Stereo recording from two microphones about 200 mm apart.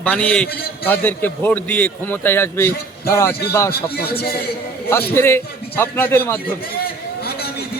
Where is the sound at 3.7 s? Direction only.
50° left (ahead or behind).